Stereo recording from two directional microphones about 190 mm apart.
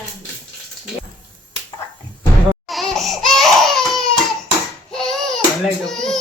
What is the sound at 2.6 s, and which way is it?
Crying, centre (ahead or behind).